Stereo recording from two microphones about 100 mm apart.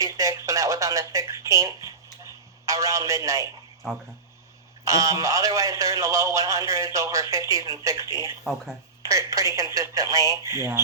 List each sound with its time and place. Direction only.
0.0 s a sound: 35° right (ahead or behind)
2.6 s a man's voice: 35° right (ahead or behind)
4.9 s a man's voice: 35° right (ahead or behind)